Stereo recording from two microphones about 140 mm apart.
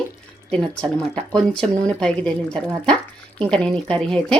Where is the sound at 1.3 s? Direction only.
5° left (ahead or behind).